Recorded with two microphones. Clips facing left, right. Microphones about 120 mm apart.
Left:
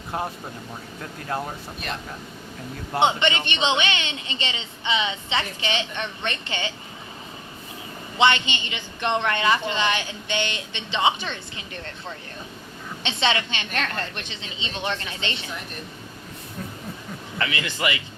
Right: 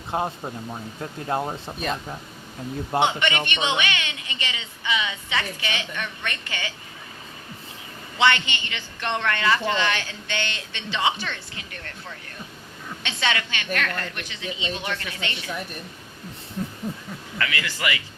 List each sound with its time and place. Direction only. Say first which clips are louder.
0.1 s speech: right 3 dB; 25° right (ahead or behind)
1.3 s speech: right 3 dB; 20° right (ahead or behind)
3.0 s a woman's voice: left 3 dB; 25° left (ahead or behind)
8.2 s a woman's voice: left 1 dB; 20° left (ahead or behind)
17.3 s a woman's voice: left 1 dB; 25° left (ahead or behind)